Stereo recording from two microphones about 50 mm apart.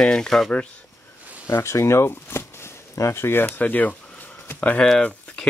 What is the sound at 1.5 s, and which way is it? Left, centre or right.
Speech, left.